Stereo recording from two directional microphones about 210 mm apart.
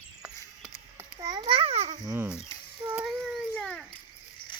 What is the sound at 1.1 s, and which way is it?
Babbling, 20° right (ahead or behind).